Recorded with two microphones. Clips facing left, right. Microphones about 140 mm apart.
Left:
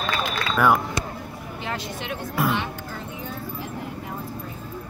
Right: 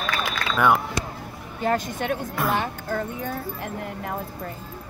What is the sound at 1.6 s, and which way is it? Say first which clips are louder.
A woman's voice: right 8 dB; 45° right (ahead or behind).